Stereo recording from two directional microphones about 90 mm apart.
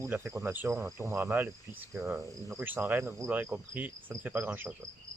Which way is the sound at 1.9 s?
30° right (ahead or behind).